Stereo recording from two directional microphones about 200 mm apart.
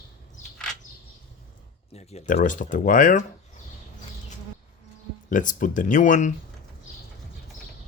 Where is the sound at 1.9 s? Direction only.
30° left (ahead or behind).